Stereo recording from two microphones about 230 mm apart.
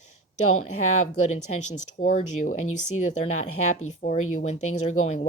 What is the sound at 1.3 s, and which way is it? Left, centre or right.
Speech, left.